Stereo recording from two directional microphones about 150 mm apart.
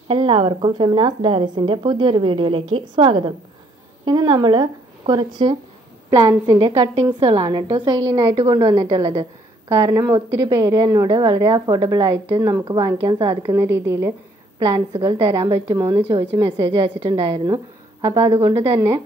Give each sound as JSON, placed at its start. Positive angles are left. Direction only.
{"t": 0.1, "sound": "a woman's voice", "side_deg": -35}
{"t": 7.2, "sound": "a woman's voice", "side_deg": -40}
{"t": 9.8, "sound": "a woman's voice", "side_deg": -20}
{"t": 13.6, "sound": "a woman's voice", "side_deg": -20}
{"t": 14.6, "sound": "a woman's voice", "side_deg": -30}